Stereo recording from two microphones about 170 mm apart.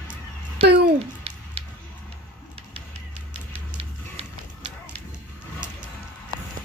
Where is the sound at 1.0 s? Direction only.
35° right (ahead or behind).